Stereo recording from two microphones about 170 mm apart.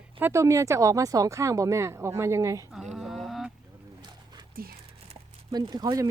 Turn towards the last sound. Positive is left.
turn(degrees=-20)  # may be behind; listen again after turning